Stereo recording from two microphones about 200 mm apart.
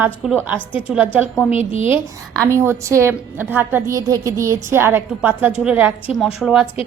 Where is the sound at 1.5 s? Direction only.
30° left (ahead or behind).